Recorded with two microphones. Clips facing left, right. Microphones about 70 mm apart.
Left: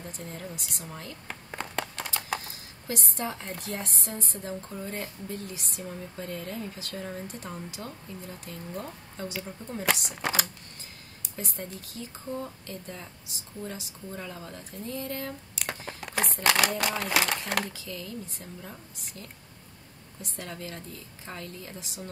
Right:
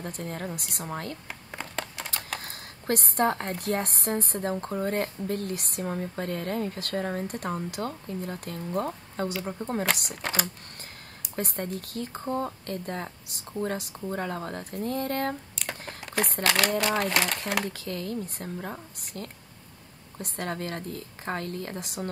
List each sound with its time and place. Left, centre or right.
0.0 s speech: right
1.2 s a sound: centre
2.4 s a sound: right
3.6 s speech: right
10.0 s speech: centre
11.3 s speech: right
15.5 s a sound: centre
16.4 s speech: centre
17.6 s speech: right